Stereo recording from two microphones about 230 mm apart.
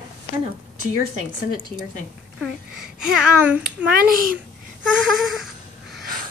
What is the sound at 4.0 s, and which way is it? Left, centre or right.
Speech, right.